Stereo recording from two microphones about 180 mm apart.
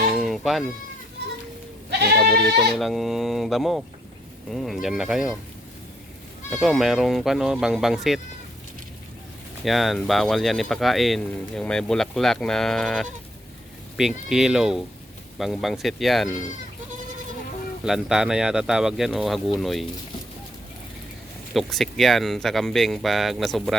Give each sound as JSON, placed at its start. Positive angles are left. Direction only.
{"t": 0.2, "sound": "sheep", "side_deg": 0}
{"t": 1.9, "sound": "goat", "side_deg": -60}
{"t": 2.7, "sound": "speech", "side_deg": 0}
{"t": 6.5, "sound": "speech", "side_deg": 0}
{"t": 9.6, "sound": "speech", "side_deg": 0}
{"t": 17.8, "sound": "speech", "side_deg": -5}
{"t": 21.5, "sound": "speech", "side_deg": 0}